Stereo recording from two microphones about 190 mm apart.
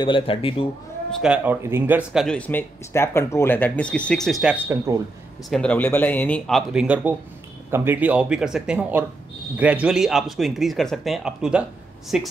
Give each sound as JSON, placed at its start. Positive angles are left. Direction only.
{"t": 0.0, "sound": "speech", "side_deg": 25}
{"t": 1.2, "sound": "speech", "side_deg": -10}
{"t": 2.2, "sound": "speech", "side_deg": 5}
{"t": 5.5, "sound": "speech", "side_deg": 5}